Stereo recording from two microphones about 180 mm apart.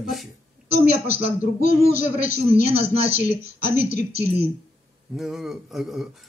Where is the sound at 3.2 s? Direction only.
45° left (ahead or behind).